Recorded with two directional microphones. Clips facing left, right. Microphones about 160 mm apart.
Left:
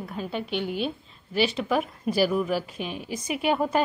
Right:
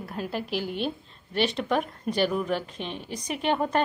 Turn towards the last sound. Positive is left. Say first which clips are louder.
# left 1 dB
turn(degrees=5)  # may be behind; listen again after turning